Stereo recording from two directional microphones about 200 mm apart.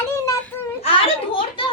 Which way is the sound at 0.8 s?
25° left (ahead or behind).